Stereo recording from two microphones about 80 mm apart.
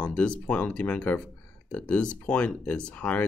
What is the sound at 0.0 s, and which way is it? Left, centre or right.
Speech, centre.